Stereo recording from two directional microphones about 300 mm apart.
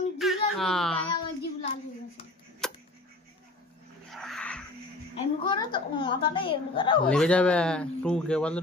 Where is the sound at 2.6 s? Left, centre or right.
Centre.